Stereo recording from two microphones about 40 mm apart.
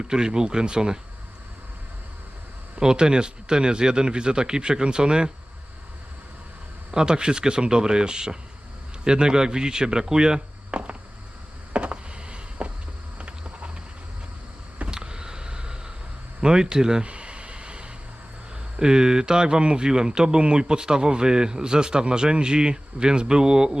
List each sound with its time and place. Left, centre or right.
0.1 s speech: centre
2.8 s speech: right
6.9 s speech: centre
11.7 s a sound: right
14.8 s vehicle: right
16.4 s speech: centre
17.1 s a sound: right
18.8 s speech: centre